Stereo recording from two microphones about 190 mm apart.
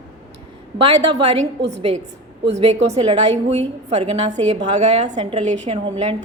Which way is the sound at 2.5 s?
35° right (ahead or behind).